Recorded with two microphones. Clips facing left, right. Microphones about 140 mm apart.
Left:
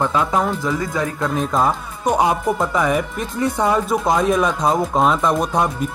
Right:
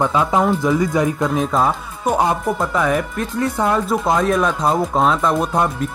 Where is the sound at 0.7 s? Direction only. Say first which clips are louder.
Right 5 dB; 15° right (ahead or behind).